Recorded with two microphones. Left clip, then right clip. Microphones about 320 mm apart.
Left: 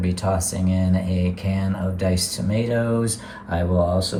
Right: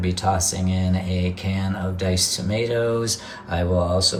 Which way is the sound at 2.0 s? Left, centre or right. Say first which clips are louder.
Right 2 dB; centre.